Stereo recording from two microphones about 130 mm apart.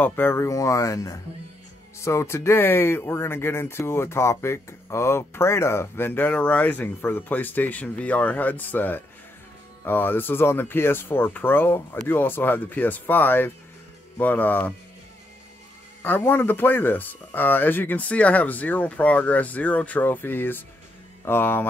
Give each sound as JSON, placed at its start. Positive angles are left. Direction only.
{"t": 0.0, "sound": "speech", "side_deg": 15}
{"t": 16.0, "sound": "speech", "side_deg": 15}